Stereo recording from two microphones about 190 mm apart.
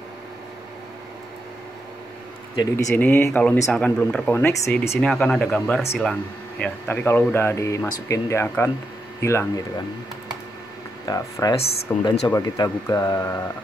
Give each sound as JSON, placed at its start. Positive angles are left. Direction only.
{"t": 2.5, "sound": "speech", "side_deg": 20}
{"t": 2.9, "sound": "speech", "side_deg": 10}
{"t": 11.1, "sound": "speech", "side_deg": 20}
{"t": 11.5, "sound": "speech", "side_deg": 30}
{"t": 12.3, "sound": "speech", "side_deg": 20}